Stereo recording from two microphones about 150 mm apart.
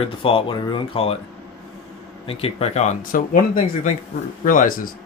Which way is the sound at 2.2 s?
40° left (ahead or behind).